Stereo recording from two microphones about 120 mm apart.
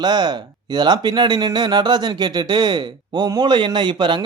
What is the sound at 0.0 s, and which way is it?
Speech, 35° right (ahead or behind).